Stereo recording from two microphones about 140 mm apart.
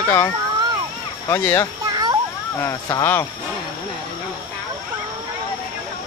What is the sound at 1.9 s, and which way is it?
Children playing, 30° right (ahead or behind).